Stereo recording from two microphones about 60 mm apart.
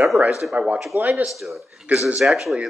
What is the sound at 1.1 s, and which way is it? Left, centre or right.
Speech, centre.